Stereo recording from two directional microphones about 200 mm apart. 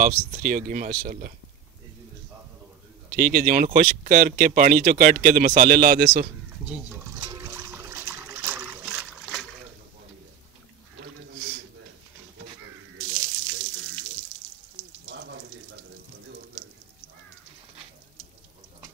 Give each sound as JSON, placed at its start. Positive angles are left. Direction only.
{"t": 0.0, "sound": "speech", "side_deg": -40}
{"t": 3.1, "sound": "speech", "side_deg": -45}
{"t": 6.7, "sound": "a sound", "side_deg": -10}
{"t": 7.2, "sound": "water", "side_deg": -15}
{"t": 15.0, "sound": "frying", "side_deg": -60}